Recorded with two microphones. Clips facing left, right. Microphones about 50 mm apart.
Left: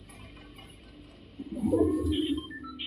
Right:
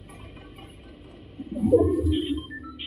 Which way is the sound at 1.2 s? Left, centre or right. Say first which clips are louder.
Right 3 dB; right.